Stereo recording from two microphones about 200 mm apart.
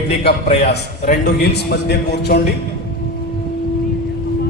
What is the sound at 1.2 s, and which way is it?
A man's voice, 55° left (ahead or behind).